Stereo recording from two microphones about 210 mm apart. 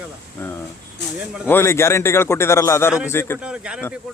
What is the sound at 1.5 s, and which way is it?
A man's voice, 10° left (ahead or behind).